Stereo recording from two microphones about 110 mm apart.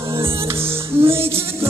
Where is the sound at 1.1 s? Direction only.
25° right (ahead or behind).